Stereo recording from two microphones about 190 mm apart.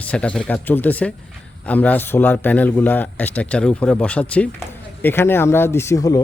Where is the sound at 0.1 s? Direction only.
5° left (ahead or behind).